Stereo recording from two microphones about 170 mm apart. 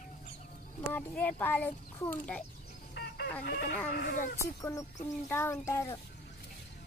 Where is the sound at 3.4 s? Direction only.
60° left (ahead or behind).